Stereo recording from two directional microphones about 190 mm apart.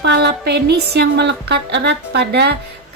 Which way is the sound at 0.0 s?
65° right (ahead or behind).